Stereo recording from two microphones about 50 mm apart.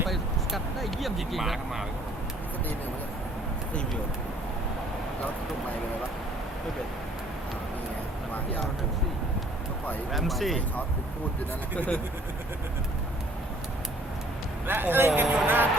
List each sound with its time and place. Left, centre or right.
0.0 s a sound: centre
10.1 s speech: centre
14.7 s speech: right